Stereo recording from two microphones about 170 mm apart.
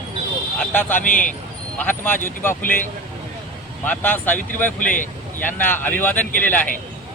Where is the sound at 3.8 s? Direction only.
10° left (ahead or behind).